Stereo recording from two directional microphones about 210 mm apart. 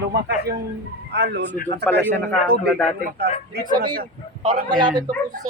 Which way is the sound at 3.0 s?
50° right (ahead or behind).